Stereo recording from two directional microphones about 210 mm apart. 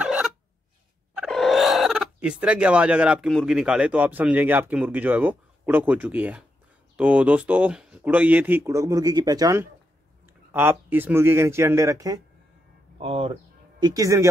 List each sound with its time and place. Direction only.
0.0 s a sound: 5° right (ahead or behind)
1.1 s speech: centre (ahead or behind); by 12.2 s 15° right (ahead or behind)
13.0 s speech: 25° right (ahead or behind)